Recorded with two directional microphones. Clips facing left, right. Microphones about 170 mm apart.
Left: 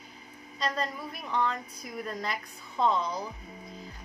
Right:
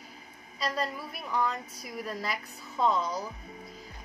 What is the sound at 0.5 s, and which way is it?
Speech, 5° right (ahead or behind).